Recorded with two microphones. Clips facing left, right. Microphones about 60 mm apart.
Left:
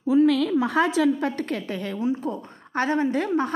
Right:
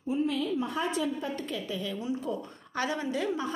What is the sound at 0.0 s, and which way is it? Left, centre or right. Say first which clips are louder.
A woman's voice: left 10 dB; left.